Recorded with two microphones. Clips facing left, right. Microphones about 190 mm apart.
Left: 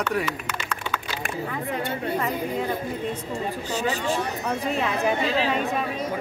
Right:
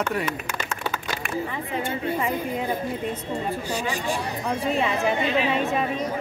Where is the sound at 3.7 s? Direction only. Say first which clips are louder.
Left 4 dB; 15° right (ahead or behind).